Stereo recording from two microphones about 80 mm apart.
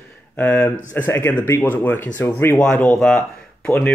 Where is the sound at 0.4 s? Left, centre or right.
Left.